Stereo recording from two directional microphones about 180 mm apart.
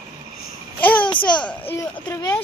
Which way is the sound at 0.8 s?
10° left (ahead or behind).